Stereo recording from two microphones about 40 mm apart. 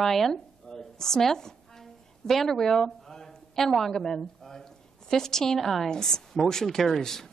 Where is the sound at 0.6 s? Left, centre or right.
Centre.